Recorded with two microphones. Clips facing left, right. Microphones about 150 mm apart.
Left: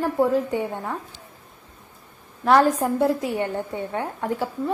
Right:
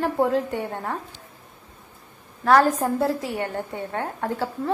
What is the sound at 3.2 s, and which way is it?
A woman's voice, 20° left (ahead or behind).